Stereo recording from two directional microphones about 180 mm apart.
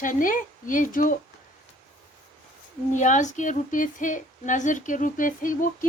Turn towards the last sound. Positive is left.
turn(degrees=50)  # may be behind; listen again after turning